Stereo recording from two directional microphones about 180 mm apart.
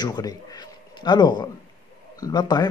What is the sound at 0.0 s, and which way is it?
Speech, 20° left (ahead or behind).